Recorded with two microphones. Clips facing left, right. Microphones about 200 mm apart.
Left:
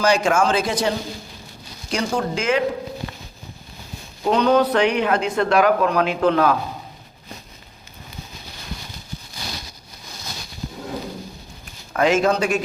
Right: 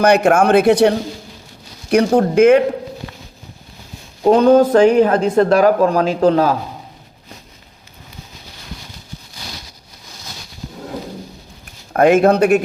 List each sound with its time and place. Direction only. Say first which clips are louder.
0.0 s speech: right 6 dB; 60° right (ahead or behind)
4.3 s speech: right 7 dB; 50° right (ahead or behind); by 6.6 s 35° right (ahead or behind)
11.9 s speech: right 7 dB; 55° right (ahead or behind)